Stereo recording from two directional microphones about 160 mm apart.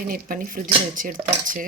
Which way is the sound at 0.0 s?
60° right (ahead or behind).